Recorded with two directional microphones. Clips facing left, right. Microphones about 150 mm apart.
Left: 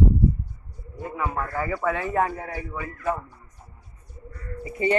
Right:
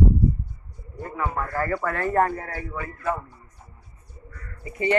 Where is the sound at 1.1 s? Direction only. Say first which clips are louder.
Right 1 dB; 5° left (ahead or behind).